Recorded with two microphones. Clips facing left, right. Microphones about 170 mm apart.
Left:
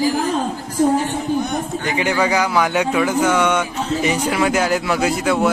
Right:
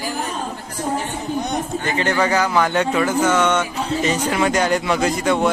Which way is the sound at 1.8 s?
15° left (ahead or behind).